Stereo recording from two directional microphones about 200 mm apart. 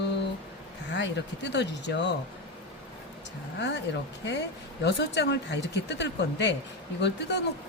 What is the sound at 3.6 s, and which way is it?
Speech, 60° left (ahead or behind).